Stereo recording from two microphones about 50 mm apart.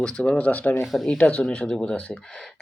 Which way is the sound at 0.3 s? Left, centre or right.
Left.